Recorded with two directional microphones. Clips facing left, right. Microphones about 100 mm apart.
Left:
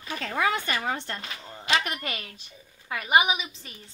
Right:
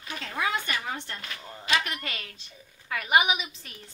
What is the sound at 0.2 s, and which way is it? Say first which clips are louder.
Speech: left 4 dB; 45° left (ahead or behind).